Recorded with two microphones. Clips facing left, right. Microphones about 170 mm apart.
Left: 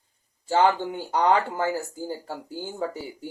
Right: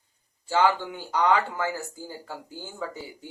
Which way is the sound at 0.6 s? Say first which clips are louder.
Left 2 dB; 25° left (ahead or behind).